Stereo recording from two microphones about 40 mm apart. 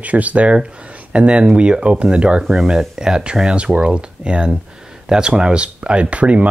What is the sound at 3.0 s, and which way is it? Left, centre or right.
Speech, right.